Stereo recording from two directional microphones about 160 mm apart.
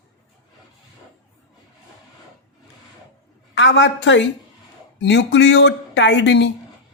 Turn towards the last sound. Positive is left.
turn(degrees=90)